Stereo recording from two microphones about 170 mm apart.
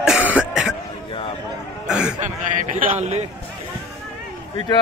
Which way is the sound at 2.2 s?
45° right (ahead or behind).